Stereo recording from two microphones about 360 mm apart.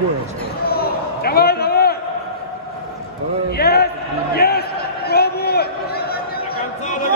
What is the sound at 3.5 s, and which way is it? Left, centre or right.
Speech, left.